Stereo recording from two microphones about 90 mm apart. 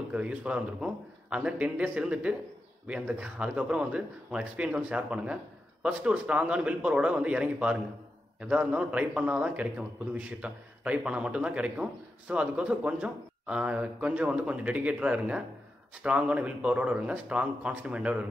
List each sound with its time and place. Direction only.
0.1 s a man's voice: 15° right (ahead or behind)